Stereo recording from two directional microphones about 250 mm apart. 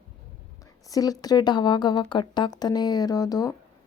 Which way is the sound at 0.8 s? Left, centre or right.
Centre.